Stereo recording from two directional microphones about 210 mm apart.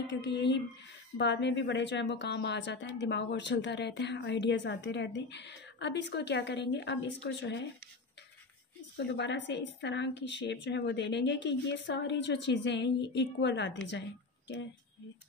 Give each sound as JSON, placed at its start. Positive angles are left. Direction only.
{"t": 0.2, "sound": "a woman's voice", "side_deg": 55}
{"t": 8.9, "sound": "a woman's voice", "side_deg": 55}